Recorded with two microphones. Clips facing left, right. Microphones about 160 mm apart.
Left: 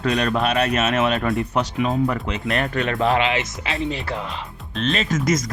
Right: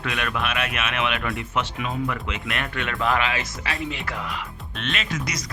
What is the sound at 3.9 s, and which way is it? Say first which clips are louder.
Speech: left 4 dB; 30° left (ahead or behind).